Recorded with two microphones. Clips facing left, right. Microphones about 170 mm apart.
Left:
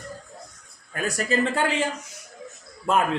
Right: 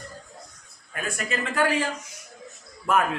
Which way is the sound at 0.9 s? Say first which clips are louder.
Left 6 dB; 40° left (ahead or behind).